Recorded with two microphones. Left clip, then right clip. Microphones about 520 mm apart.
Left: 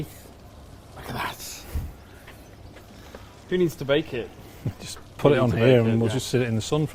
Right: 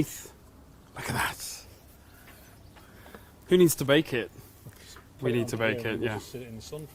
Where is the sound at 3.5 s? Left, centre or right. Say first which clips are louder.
Right 1 dB; right.